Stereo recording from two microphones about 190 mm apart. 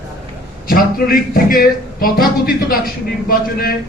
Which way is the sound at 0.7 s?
50° left (ahead or behind).